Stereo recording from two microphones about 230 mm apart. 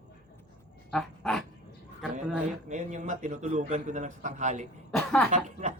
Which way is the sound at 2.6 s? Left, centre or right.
Right.